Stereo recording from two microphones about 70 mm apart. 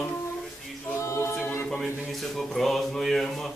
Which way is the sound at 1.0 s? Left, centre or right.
Left.